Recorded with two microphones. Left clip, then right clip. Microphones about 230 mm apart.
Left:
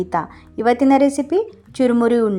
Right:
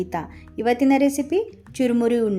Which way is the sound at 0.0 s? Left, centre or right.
Centre.